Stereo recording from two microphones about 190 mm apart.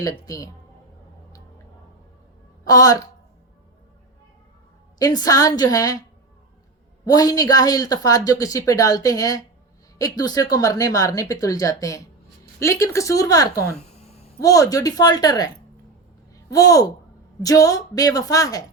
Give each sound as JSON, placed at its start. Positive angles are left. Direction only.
{"t": 0.0, "sound": "a woman's voice", "side_deg": 20}
{"t": 2.6, "sound": "a woman's voice", "side_deg": 20}
{"t": 4.9, "sound": "a woman's voice", "side_deg": 20}
{"t": 7.0, "sound": "a woman's voice", "side_deg": 20}
{"t": 13.7, "sound": "a sound", "side_deg": 35}
{"t": 14.4, "sound": "a woman's voice", "side_deg": 20}
{"t": 16.5, "sound": "a woman's voice", "side_deg": 20}